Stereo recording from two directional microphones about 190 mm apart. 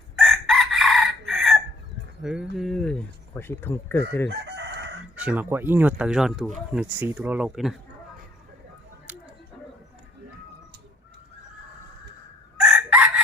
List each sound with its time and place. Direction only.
0.2 s chicken: centre (ahead or behind)
2.2 s speech: centre (ahead or behind)
4.3 s crowing: 65° right (ahead or behind)
5.1 s speech: 10° right (ahead or behind)
9.1 s a sound: 10° right (ahead or behind)
12.5 s crowing: 5° right (ahead or behind)